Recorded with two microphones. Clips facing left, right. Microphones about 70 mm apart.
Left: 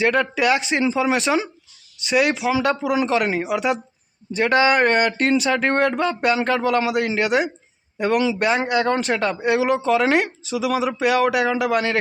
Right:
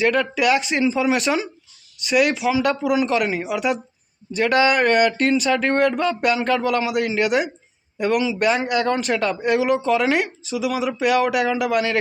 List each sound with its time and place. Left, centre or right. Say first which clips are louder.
0.0 s a man's voice: even; left